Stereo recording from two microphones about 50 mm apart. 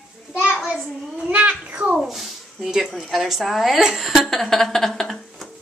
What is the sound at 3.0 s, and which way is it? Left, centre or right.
A woman's voice, centre.